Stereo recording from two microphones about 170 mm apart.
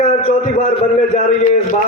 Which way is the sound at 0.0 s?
45° left (ahead or behind).